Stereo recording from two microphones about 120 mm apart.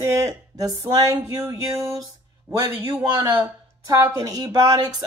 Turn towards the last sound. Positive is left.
turn(degrees=-30)  # may be behind; listen again after turning